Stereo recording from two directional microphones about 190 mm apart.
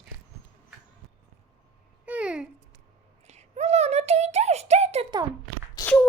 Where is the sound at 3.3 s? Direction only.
35° right (ahead or behind).